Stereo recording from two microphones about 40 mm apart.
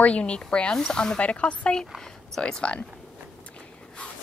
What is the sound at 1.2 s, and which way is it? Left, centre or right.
A woman's voice, left.